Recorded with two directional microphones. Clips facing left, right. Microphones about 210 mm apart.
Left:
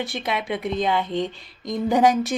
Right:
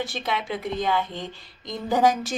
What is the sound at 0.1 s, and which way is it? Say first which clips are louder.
A woman's voice: left 2 dB; 15° left (ahead or behind).